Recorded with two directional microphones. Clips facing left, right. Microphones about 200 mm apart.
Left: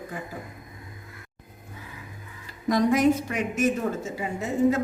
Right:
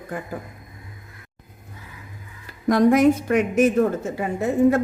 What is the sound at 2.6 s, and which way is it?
A woman's voice, 55° right (ahead or behind).